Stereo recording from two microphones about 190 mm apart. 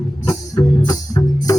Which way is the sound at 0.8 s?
20° left (ahead or behind).